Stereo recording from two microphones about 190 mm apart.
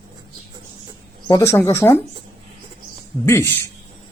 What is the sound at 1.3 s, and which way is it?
Speech, 15° left (ahead or behind).